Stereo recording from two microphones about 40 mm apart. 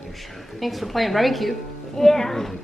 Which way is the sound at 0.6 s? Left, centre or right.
Centre.